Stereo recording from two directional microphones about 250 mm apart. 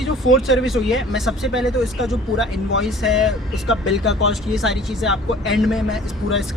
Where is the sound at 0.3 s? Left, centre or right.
Left.